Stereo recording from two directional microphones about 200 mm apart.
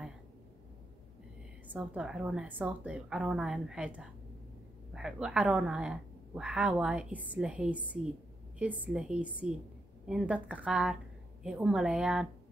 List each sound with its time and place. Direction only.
1.7 s a woman's voice: 5° right (ahead or behind)